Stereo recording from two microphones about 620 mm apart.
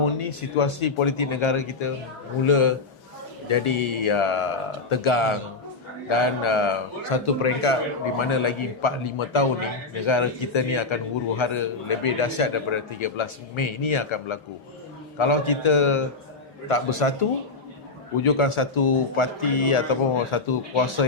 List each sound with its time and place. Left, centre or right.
0.0 s a man's voice: left
18.2 s a man's voice: left